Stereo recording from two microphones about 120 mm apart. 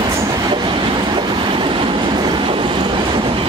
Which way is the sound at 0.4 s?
40° right (ahead or behind).